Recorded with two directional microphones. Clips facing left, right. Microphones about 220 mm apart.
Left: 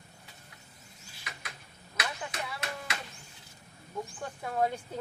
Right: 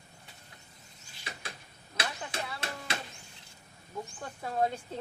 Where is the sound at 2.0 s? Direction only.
30° right (ahead or behind).